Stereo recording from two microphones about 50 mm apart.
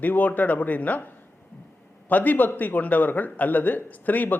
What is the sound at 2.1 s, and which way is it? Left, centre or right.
A man's voice, left.